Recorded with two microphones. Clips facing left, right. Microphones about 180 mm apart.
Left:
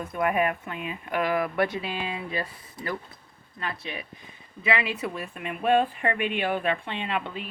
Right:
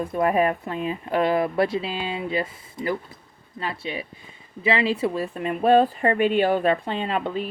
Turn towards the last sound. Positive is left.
turn(degrees=-40)  # may be behind; listen again after turning